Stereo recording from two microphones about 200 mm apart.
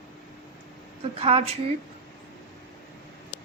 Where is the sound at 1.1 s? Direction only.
30° right (ahead or behind).